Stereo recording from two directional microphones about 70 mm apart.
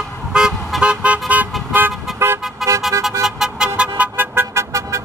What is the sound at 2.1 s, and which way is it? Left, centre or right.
Vehicle, right.